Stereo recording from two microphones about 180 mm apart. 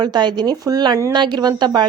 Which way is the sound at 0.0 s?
25° right (ahead or behind).